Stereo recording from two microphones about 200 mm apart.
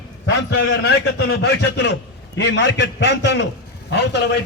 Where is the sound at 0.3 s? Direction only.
60° left (ahead or behind).